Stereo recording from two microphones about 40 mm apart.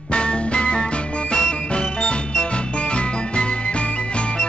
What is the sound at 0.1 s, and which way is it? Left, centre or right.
Music, left.